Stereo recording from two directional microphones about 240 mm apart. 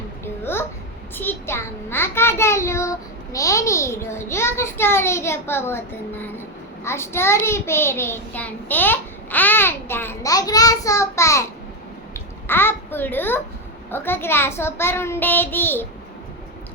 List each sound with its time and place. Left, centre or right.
0.5 s babbling: centre
1.1 s a child's voice: centre